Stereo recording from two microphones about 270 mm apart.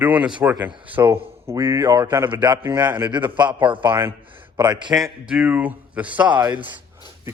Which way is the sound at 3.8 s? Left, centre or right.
Centre.